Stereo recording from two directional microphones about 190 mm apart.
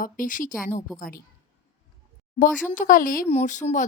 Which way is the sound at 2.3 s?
40° left (ahead or behind).